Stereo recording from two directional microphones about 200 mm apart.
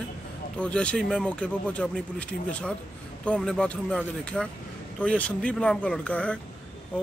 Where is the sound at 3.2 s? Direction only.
5° left (ahead or behind).